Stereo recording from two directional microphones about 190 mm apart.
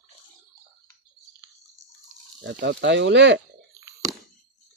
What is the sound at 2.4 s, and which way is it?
Speech, 65° right (ahead or behind).